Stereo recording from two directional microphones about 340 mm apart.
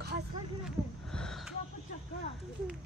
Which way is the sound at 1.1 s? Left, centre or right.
Centre.